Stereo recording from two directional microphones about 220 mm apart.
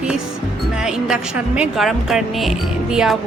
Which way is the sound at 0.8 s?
Centre (ahead or behind).